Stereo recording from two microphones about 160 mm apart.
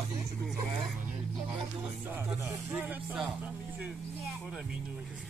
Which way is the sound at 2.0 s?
10° right (ahead or behind).